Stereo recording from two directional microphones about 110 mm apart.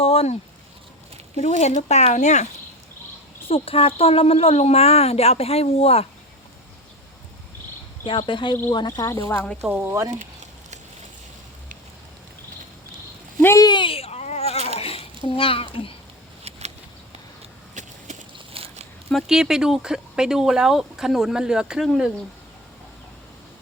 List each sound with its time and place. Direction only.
0.0 s a sound: 65° left (ahead or behind)
1.4 s speech: 80° left
3.5 s a woman's voice: 60° left (ahead or behind)
8.0 s speech: 50° left (ahead or behind)
8.9 s speech: 30° left (ahead or behind)
9.6 s speech: 15° right (ahead or behind)
9.9 s speech: 30° right (ahead or behind)
13.4 s speech: 25° left (ahead or behind)
13.7 s a sound: 50° left (ahead or behind); by 14.7 s 75° left (ahead or behind)
14.8 s a sound: 60° left (ahead or behind)
16.4 s a sound: 75° right (ahead or behind)
18.3 s biting: 60° right (ahead or behind)
19.1 s speech: 5° right (ahead or behind)